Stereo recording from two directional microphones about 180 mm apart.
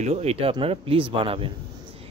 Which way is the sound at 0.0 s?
35° right (ahead or behind).